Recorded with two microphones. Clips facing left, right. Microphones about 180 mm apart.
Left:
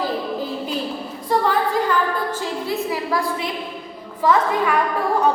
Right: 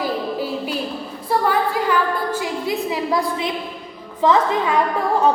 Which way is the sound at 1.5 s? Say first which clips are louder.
Right 2 dB; 10° right (ahead or behind).